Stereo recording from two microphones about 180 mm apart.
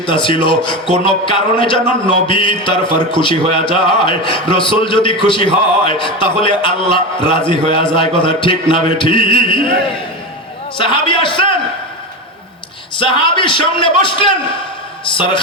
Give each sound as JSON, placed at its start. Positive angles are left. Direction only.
{"t": 0.0, "sound": "a man's voice", "side_deg": 30}
{"t": 10.8, "sound": "a man's voice", "side_deg": 30}
{"t": 13.0, "sound": "a man's voice", "side_deg": 30}